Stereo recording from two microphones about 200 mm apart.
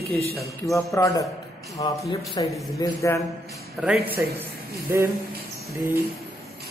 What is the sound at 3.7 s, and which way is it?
A man's voice, 5° right (ahead or behind).